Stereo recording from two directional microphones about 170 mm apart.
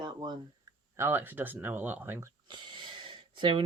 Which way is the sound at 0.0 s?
25° right (ahead or behind).